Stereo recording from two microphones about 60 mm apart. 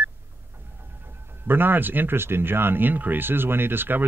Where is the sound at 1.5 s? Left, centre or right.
Right.